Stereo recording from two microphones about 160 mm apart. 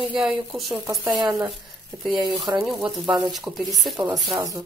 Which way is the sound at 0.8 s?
20° right (ahead or behind).